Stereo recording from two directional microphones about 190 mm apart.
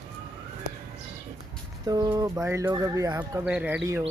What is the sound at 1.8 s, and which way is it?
Speech, 20° right (ahead or behind).